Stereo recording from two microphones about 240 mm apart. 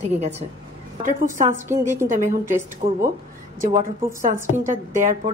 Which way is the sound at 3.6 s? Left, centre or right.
Right.